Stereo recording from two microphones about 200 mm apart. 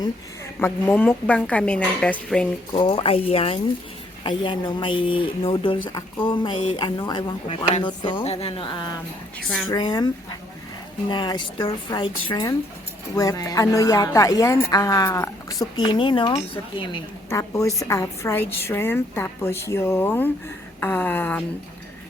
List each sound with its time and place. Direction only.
0.6 s a woman's voice: 10° left (ahead or behind)
2.7 s a woman's voice: 25° left (ahead or behind)
9.4 s speech: centre (ahead or behind)
9.7 s a woman's voice: 20° left (ahead or behind)
11.1 s a woman's voice: 25° left (ahead or behind)